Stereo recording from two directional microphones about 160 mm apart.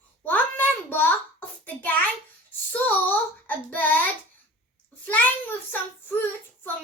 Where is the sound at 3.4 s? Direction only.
10° left (ahead or behind).